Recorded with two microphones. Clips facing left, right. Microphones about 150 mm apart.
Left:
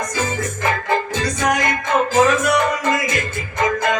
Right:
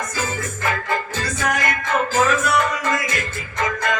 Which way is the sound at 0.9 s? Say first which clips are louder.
Left 4 dB; 20° left (ahead or behind).